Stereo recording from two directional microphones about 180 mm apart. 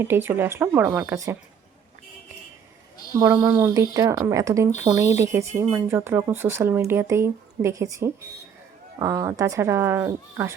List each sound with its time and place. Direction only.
0.0 s speech: 10° right (ahead or behind)
3.2 s speech: 10° right (ahead or behind)